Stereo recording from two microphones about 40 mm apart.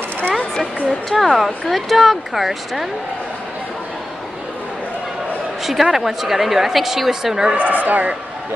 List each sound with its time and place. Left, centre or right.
1.1 s speech: centre
5.6 s a woman's voice: centre
7.5 s speech: right